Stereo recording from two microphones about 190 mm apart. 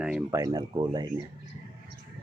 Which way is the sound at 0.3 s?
20° right (ahead or behind).